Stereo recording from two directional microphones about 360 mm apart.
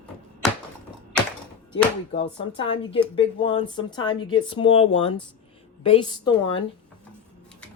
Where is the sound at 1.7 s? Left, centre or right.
Centre.